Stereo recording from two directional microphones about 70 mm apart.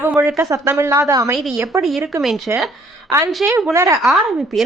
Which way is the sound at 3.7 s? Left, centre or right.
Right.